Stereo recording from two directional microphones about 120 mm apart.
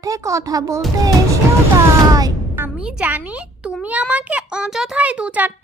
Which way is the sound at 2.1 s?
30° right (ahead or behind).